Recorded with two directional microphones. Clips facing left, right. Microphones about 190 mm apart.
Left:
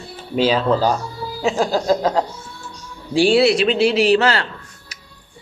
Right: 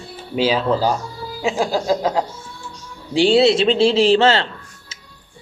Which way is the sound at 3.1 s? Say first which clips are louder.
Even; 20° right (ahead or behind).